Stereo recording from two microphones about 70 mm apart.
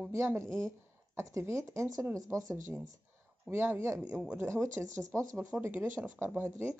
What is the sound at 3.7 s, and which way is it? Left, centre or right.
Speech, right.